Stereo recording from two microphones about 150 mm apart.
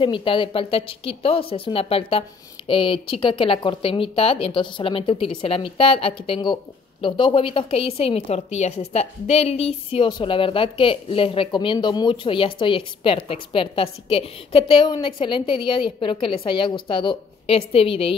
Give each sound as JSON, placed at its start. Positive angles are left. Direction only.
{"t": 0.0, "sound": "speech", "side_deg": 35}
{"t": 9.9, "sound": "speech", "side_deg": 35}